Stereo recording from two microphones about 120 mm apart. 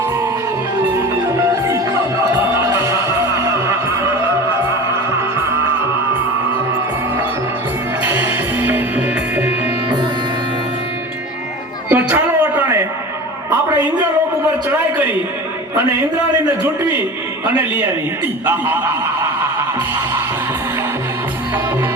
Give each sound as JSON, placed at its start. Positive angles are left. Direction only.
{"t": 2.6, "sound": "music", "side_deg": -25}
{"t": 8.0, "sound": "music", "side_deg": -15}
{"t": 11.9, "sound": "music", "side_deg": -15}
{"t": 13.5, "sound": "a sound", "side_deg": -15}
{"t": 16.9, "sound": "a sound", "side_deg": -20}
{"t": 18.4, "sound": "a man's voice", "side_deg": -15}